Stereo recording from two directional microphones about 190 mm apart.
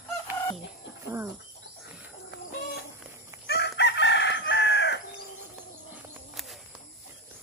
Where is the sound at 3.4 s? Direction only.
60° left (ahead or behind).